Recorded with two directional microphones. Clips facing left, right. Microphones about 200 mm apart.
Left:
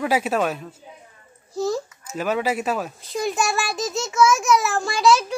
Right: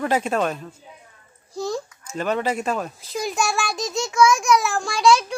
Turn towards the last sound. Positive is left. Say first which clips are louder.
# even
turn(degrees=5)  # may be behind; listen again after turning